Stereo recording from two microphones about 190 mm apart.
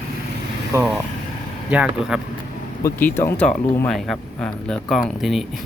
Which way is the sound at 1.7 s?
5° right (ahead or behind).